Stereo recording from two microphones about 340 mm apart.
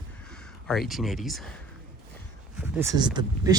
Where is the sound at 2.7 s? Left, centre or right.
Centre.